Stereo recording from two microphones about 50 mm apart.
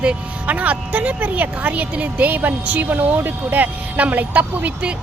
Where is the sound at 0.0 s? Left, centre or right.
Right.